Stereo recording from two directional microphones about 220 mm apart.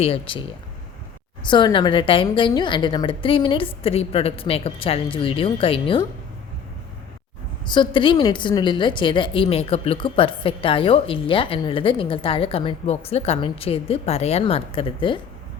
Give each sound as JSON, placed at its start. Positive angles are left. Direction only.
{"t": 0.0, "sound": "a woman's voice", "side_deg": 25}
{"t": 1.5, "sound": "a woman's voice", "side_deg": 20}
{"t": 7.6, "sound": "a woman's voice", "side_deg": 20}